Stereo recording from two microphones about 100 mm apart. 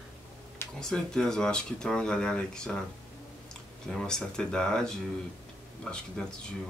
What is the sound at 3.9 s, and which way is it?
Speech, 5° left (ahead or behind).